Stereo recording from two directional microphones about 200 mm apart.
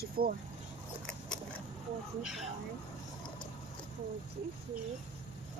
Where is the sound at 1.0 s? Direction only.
5° left (ahead or behind).